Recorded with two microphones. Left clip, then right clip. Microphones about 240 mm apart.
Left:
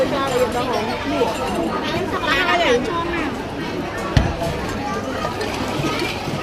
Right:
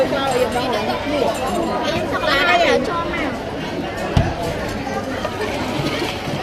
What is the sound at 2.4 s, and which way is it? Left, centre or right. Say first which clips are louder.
Speech: right 2 dB; right.